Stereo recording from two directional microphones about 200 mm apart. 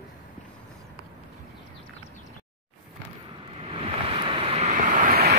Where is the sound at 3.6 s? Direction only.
30° right (ahead or behind); by 5.3 s 45° right (ahead or behind).